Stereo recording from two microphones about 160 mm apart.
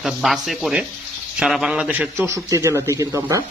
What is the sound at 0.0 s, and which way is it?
A man's voice, centre (ahead or behind).